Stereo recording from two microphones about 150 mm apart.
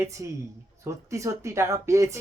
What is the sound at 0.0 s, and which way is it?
Speech, 20° right (ahead or behind).